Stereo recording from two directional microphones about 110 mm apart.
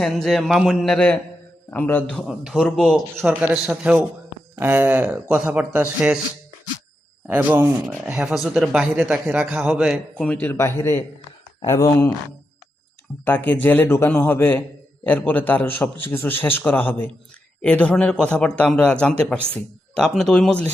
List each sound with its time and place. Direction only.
0.0 s a man's voice: centre (ahead or behind)
2.2 s a man's voice: 5° right (ahead or behind)
4.5 s a man's voice: 15° right (ahead or behind)
7.3 s speech: 15° right (ahead or behind)
8.0 s a man's voice: 5° right (ahead or behind)
10.2 s a man's voice: 10° left (ahead or behind)
13.2 s a man's voice: 15° left (ahead or behind)